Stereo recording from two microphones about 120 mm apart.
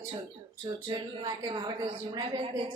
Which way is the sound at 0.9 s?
40° right (ahead or behind).